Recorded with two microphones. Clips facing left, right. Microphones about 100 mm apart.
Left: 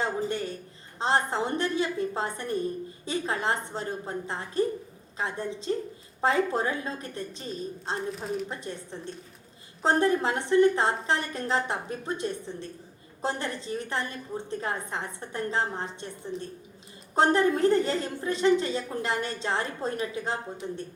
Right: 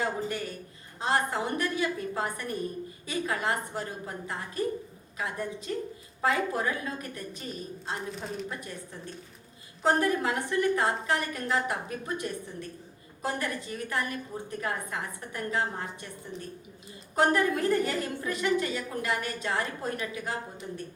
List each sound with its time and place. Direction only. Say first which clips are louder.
0.0 s a sound: left 2 dB; 30° left (ahead or behind)
0.9 s a woman's voice: left 2 dB; 30° left (ahead or behind)
8.1 s speech: left 4 dB; centre (ahead or behind)
8.4 s a woman's voice: left 2 dB; 30° left (ahead or behind)
16.3 s speech: left 5 dB; centre (ahead or behind)
17.2 s a woman's voice: left 3 dB; 30° left (ahead or behind)